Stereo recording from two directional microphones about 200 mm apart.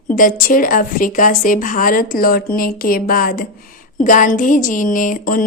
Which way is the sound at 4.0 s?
40° left (ahead or behind).